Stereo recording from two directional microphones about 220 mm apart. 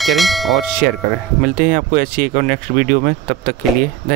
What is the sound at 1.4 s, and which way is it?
Speech, 40° right (ahead or behind).